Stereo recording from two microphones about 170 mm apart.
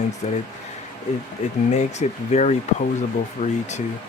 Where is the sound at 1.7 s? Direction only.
40° left (ahead or behind).